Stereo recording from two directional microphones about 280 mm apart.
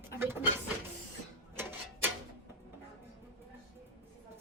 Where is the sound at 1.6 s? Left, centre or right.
Centre.